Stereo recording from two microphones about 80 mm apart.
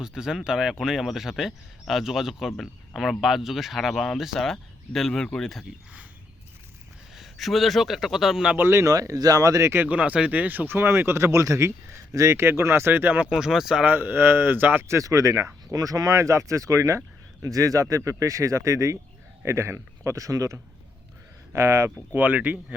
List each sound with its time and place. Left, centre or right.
0.0 s speech: centre
7.2 s speech: centre
8.5 s speech: right
8.9 s speech: right
9.8 s speech: centre; by 12.4 s right
12.4 s speech: right
13.3 s speech: centre
13.8 s speech: right
14.8 s speech: right
22.1 s speech: centre